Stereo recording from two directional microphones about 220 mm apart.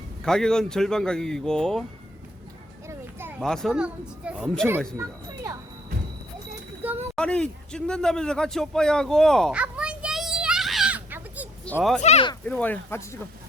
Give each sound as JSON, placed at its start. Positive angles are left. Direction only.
{"t": 0.3, "sound": "speech", "side_deg": 5}
{"t": 2.8, "sound": "a sound", "side_deg": -10}
{"t": 3.4, "sound": "speech", "side_deg": 0}
{"t": 4.9, "sound": "speech", "side_deg": -15}
{"t": 6.8, "sound": "speech", "side_deg": -10}
{"t": 7.2, "sound": "a sound", "side_deg": 5}
{"t": 11.6, "sound": "speech", "side_deg": 5}
{"t": 12.0, "sound": "speech", "side_deg": 30}
{"t": 12.5, "sound": "speech", "side_deg": 5}